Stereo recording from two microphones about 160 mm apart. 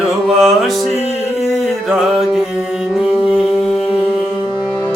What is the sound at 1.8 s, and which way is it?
Music, centre (ahead or behind).